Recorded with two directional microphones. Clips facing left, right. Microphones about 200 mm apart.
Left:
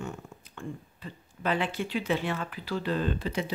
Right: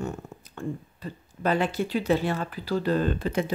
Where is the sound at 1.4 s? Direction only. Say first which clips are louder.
Right 4 dB; 40° right (ahead or behind).